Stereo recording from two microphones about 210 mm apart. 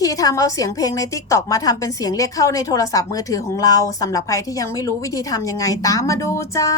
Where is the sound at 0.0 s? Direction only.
15° left (ahead or behind).